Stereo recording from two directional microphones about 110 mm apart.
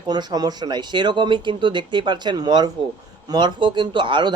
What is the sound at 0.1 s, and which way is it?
Speech, 40° right (ahead or behind).